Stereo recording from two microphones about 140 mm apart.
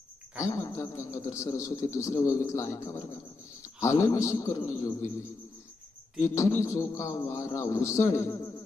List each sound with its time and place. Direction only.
0.5 s speech: 20° left (ahead or behind)
6.2 s speech: 20° left (ahead or behind)